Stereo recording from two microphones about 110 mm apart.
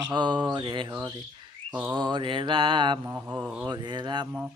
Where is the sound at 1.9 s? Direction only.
45° right (ahead or behind).